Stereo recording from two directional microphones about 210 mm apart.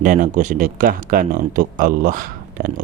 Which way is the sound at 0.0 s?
40° right (ahead or behind).